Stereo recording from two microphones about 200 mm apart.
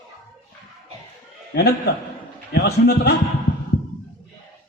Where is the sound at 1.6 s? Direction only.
55° left (ahead or behind).